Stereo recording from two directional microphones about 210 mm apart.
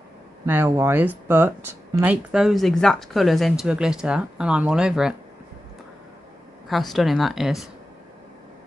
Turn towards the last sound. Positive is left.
turn(degrees=0)  # may be behind; listen again after turning